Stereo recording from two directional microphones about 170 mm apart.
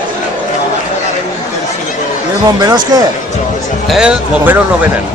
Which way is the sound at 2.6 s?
20° right (ahead or behind).